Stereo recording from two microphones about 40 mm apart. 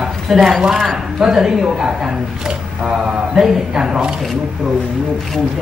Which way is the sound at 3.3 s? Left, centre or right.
Centre.